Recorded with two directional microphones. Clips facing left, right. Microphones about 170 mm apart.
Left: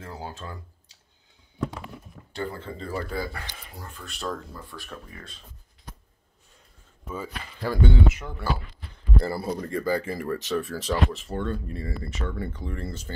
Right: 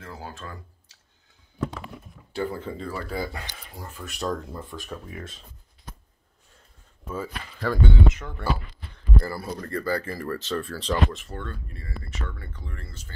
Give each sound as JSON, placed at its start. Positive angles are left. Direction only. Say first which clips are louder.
{"t": 0.1, "sound": "speech", "louder": "left 1 dB", "side_deg": 20}
{"t": 2.3, "sound": "speech", "louder": "right 3 dB", "side_deg": -10}
{"t": 4.0, "sound": "speech", "louder": "right 4 dB", "side_deg": -20}
{"t": 7.1, "sound": "speech", "louder": "right 2 dB", "side_deg": 5}
{"t": 9.2, "sound": "speech", "louder": "left 3 dB", "side_deg": 25}
{"t": 11.2, "sound": "speech", "louder": "left 7 dB", "side_deg": 25}